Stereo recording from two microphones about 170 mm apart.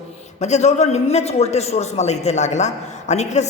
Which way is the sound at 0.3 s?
40° left (ahead or behind).